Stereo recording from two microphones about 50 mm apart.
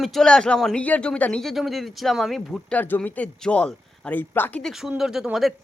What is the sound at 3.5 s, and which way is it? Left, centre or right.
Speech, left.